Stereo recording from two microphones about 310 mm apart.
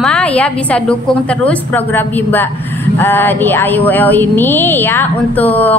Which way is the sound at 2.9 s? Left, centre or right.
Centre.